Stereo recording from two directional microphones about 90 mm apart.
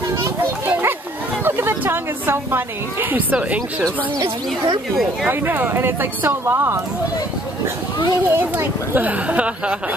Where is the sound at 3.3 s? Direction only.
15° right (ahead or behind).